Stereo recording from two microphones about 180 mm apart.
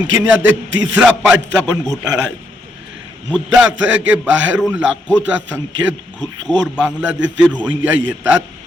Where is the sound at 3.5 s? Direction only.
5° right (ahead or behind).